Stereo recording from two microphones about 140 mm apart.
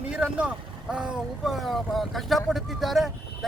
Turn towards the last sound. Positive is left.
turn(degrees=0)  # may be behind; listen again after turning